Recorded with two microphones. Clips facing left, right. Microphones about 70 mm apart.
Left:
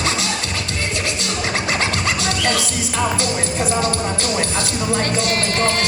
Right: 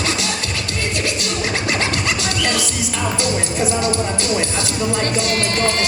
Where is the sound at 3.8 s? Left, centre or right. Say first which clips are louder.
Right 1 dB; right.